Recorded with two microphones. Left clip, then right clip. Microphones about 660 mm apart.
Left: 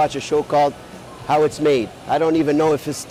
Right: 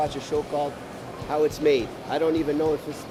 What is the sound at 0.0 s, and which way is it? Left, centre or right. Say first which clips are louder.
Speech: left 8 dB; left.